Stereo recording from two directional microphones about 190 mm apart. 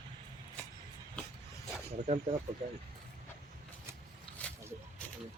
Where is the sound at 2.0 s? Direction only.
40° right (ahead or behind).